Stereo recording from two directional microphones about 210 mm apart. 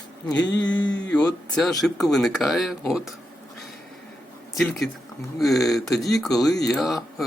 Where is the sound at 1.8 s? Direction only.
Centre (ahead or behind).